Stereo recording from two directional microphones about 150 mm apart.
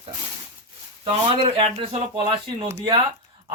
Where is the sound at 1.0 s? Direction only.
40° right (ahead or behind).